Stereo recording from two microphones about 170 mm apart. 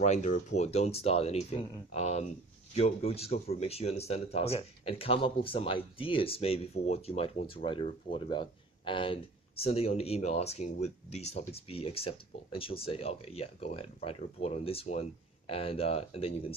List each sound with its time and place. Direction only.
0.0 s speech: 45° left (ahead or behind)